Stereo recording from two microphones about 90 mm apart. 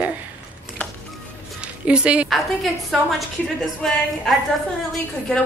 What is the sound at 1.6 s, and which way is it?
Speech, 10° right (ahead or behind).